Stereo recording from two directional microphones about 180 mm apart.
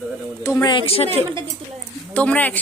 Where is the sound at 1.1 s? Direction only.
30° right (ahead or behind).